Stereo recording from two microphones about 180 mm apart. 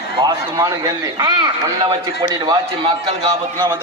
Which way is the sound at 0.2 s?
20° right (ahead or behind).